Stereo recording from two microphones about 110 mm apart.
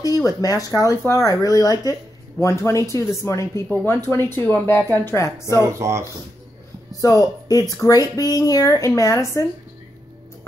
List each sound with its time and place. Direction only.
0.0 s speech: 35° left (ahead or behind)
5.7 s speech: 25° right (ahead or behind)
7.0 s speech: 35° left (ahead or behind)